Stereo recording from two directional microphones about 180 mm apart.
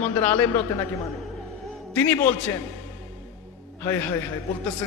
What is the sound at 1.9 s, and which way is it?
Speech, 10° left (ahead or behind).